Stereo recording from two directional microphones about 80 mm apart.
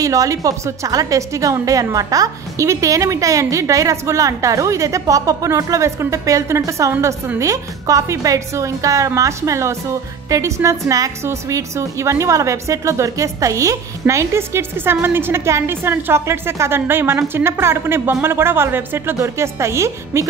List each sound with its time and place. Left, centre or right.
0.0 s a woman's voice: right